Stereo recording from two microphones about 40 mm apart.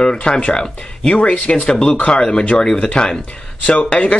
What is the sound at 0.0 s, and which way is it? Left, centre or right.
Speech, left.